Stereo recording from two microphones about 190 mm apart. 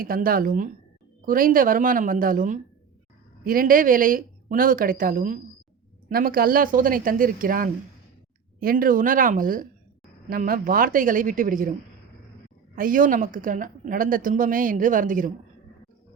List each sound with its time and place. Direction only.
0.0 s speech: 50° right (ahead or behind)
12.7 s speech: 45° right (ahead or behind)